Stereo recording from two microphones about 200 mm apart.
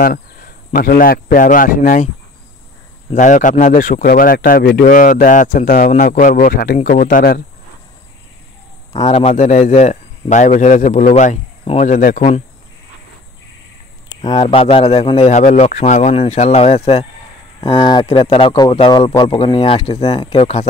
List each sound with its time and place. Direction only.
0.0 s speech: 45° left (ahead or behind)
3.1 s a man's voice: 40° left (ahead or behind)
9.1 s a man's voice: 35° left (ahead or behind)
14.2 s a man's voice: 25° left (ahead or behind)